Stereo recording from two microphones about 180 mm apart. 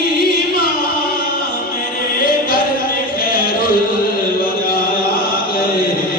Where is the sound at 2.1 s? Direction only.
55° left (ahead or behind).